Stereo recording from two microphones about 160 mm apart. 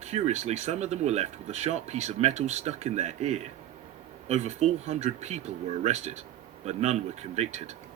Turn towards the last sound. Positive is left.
turn(degrees=-45)  # may be behind; listen again after turning